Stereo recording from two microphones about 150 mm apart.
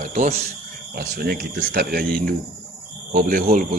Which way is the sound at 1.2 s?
90° right.